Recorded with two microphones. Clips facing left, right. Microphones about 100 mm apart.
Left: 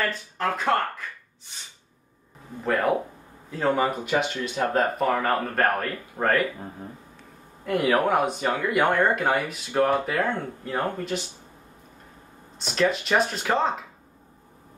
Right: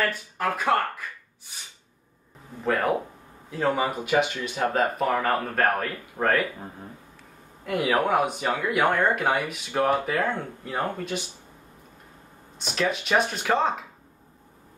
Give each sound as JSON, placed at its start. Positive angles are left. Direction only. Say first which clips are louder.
{"t": 0.0, "sound": "speech", "louder": "even", "side_deg": -10}
{"t": 2.6, "sound": "speech", "louder": "left 1 dB", "side_deg": 0}
{"t": 7.6, "sound": "speech", "louder": "left 2 dB", "side_deg": -5}
{"t": 12.5, "sound": "speech", "louder": "left 3 dB", "side_deg": -5}